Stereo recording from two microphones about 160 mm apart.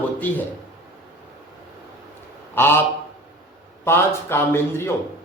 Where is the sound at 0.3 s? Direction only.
10° left (ahead or behind).